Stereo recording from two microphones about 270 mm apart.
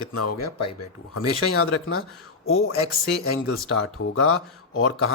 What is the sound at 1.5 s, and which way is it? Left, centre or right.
Speech, left.